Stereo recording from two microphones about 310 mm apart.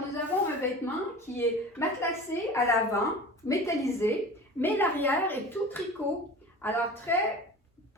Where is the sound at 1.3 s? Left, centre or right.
Centre.